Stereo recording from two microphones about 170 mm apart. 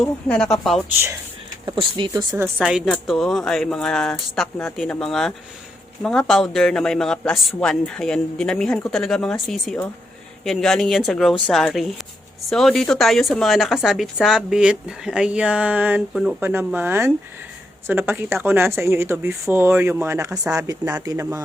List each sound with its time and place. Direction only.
0.0 s speech: 5° left (ahead or behind)
1.6 s speech: 30° right (ahead or behind)
2.4 s speech: 5° right (ahead or behind)